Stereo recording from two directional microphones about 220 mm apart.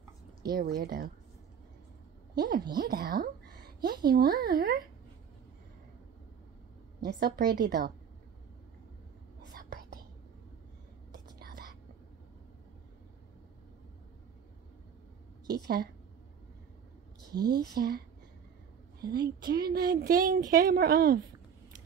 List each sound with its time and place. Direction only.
0.4 s a woman's voice: 45° right (ahead or behind)
2.7 s a woman's voice: 45° right (ahead or behind)
7.0 s a woman's voice: 45° right (ahead or behind)
11.3 s whispering: 40° right (ahead or behind)
15.5 s a woman's voice: 45° right (ahead or behind)
17.3 s speech: 20° right (ahead or behind)
17.7 s a woman's voice: 45° right (ahead or behind)